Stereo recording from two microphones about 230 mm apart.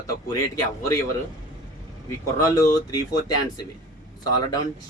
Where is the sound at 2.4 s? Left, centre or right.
Centre.